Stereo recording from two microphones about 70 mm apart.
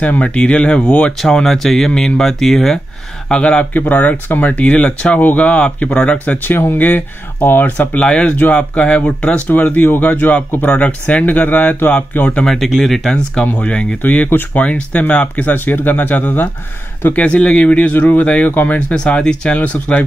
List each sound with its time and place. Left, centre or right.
0.0 s speech: left
12.6 s speech: centre; by 18.8 s left
18.9 s speech: centre